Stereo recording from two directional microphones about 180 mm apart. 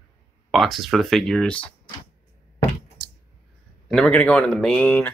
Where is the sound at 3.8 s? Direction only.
5° left (ahead or behind).